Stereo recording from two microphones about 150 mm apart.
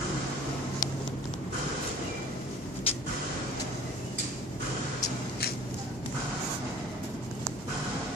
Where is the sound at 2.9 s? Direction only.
40° left (ahead or behind).